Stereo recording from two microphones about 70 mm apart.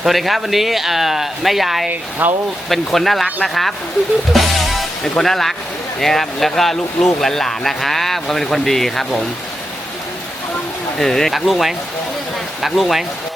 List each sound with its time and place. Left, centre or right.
0.0 s speech: centre
1.9 s speech: right
2.6 s speech: centre
4.3 s music: centre
5.1 s speech: centre
10.9 s speech: centre